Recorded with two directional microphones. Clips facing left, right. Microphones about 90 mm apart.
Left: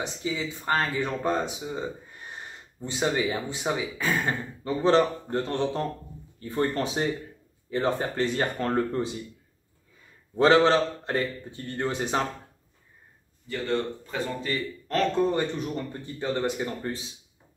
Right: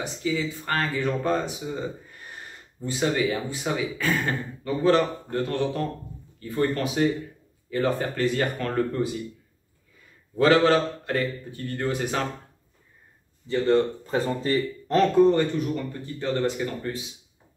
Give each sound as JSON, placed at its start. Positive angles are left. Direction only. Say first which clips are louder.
{"t": 0.0, "sound": "speech", "louder": "right 3 dB", "side_deg": 20}
{"t": 10.3, "sound": "speech", "louder": "even", "side_deg": 25}
{"t": 13.7, "sound": "speech", "louder": "right 7 dB", "side_deg": -35}
{"t": 14.9, "sound": "speech", "louder": "right 5 dB", "side_deg": -20}
{"t": 15.3, "sound": "speech", "louder": "right 4 dB", "side_deg": 25}